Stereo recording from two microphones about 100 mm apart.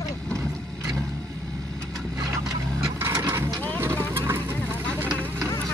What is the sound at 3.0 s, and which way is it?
Vehicle, 25° right (ahead or behind).